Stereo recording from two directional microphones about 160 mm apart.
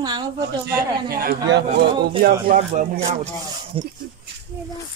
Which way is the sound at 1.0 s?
80° right.